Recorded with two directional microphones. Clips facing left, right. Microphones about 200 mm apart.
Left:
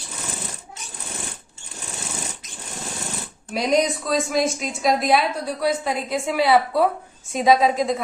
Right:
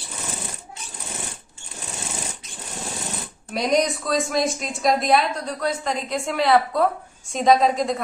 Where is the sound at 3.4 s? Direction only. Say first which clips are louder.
Left 1 dB; centre (ahead or behind).